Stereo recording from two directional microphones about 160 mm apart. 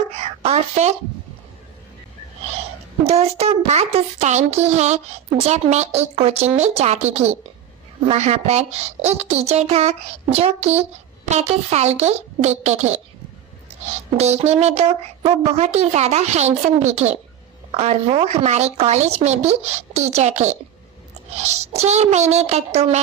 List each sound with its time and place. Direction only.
0.1 s a sound: 40° right (ahead or behind)
3.0 s a child's voice: 40° right (ahead or behind)
14.2 s a child's voice: 40° right (ahead or behind)